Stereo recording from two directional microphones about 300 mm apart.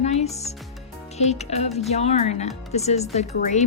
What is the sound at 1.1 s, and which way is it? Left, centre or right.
Speech, left.